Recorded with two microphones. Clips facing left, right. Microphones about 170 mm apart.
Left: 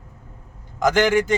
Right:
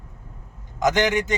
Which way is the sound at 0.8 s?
20° right (ahead or behind).